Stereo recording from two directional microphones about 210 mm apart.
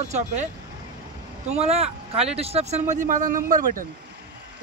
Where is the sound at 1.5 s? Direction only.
30° right (ahead or behind).